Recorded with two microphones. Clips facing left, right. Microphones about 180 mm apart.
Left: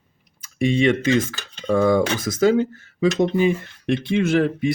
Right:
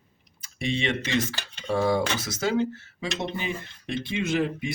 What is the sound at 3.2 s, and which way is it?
Speech, 45° left (ahead or behind).